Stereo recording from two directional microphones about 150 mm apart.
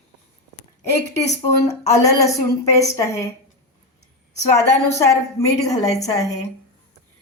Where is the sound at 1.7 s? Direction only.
20° left (ahead or behind).